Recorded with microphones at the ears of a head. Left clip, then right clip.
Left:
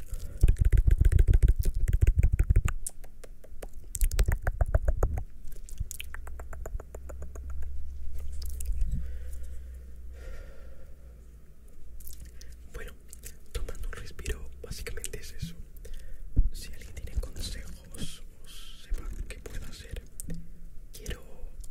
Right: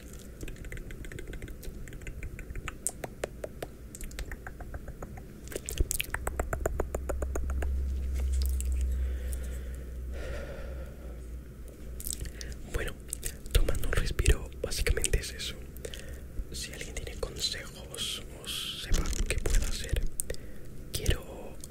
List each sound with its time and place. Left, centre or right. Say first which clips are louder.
0.4 s vehicle: left 6 dB; left
3.0 s finger snapping: right 16 dB; right
4.2 s a sound: left 8 dB; left
5.5 s finger snapping: right 13 dB; right
10.2 s gasp: right 11 dB; right
12.1 s whispering: right 12 dB; right